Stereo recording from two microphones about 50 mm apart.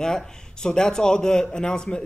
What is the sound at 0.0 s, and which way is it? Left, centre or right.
Speech, centre.